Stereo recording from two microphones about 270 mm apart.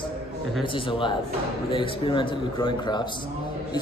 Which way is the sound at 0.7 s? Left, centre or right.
Centre.